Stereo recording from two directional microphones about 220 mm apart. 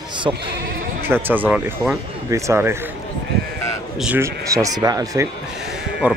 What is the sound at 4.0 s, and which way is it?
Speech, 10° right (ahead or behind).